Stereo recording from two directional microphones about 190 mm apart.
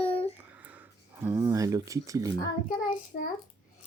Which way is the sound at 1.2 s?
15° right (ahead or behind).